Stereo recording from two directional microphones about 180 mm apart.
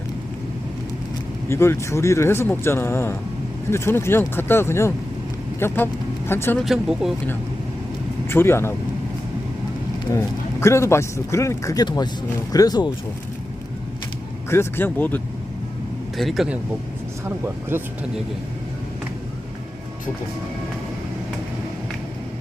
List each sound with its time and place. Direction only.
1.5 s a man's voice: 15° left (ahead or behind)
6.6 s speech: centre (ahead or behind)
8.3 s a man's voice: 15° left (ahead or behind)
10.1 s a man's voice: 15° left (ahead or behind)
14.5 s a man's voice: 10° left (ahead or behind)
17.2 s speech: 15° right (ahead or behind)